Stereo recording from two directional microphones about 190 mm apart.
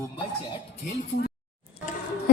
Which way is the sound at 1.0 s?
60° left (ahead or behind).